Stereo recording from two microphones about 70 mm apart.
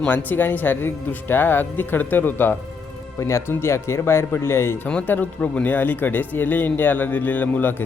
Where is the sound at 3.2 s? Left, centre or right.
Left.